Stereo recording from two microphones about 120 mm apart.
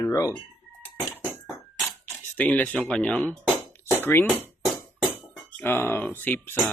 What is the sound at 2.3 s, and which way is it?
Speech, 15° left (ahead or behind).